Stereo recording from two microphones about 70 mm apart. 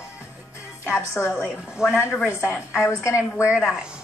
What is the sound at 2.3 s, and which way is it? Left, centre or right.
Speech, left.